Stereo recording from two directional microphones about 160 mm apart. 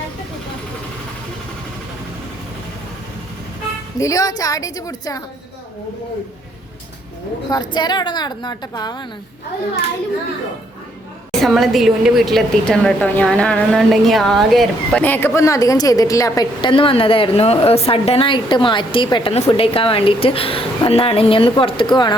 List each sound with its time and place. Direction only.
3.9 s a woman's voice: 20° left (ahead or behind)
7.5 s a woman's voice: 25° left (ahead or behind)
11.3 s a woman's voice: centre (ahead or behind)
15.0 s a woman's voice: 15° left (ahead or behind); by 22.1 s 30° left (ahead or behind)